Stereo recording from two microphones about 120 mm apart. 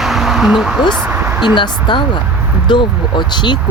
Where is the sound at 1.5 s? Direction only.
40° left (ahead or behind).